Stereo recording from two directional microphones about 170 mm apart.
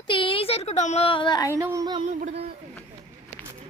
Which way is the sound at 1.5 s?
20° right (ahead or behind).